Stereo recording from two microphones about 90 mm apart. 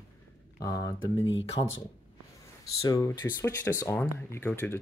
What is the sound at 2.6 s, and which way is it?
Speech, 40° left (ahead or behind).